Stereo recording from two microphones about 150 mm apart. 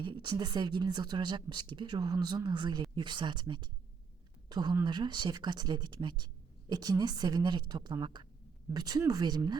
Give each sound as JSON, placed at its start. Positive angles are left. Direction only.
{"t": 0.0, "sound": "a woman's voice", "side_deg": -30}